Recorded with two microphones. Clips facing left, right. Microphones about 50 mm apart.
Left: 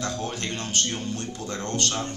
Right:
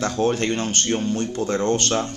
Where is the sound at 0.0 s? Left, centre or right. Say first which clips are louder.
Right 9 dB; right.